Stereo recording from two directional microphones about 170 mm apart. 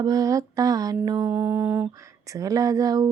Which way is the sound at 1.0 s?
20° right (ahead or behind).